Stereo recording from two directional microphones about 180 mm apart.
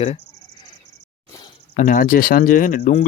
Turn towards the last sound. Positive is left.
turn(degrees=45)  # may be behind; listen again after turning